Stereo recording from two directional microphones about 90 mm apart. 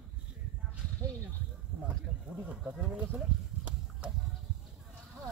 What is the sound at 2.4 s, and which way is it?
Speech, 15° right (ahead or behind).